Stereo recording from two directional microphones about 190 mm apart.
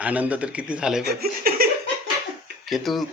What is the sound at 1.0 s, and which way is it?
Speech, 50° right (ahead or behind).